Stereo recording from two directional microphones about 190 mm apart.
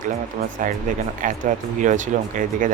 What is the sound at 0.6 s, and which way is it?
Speech, 45° right (ahead or behind).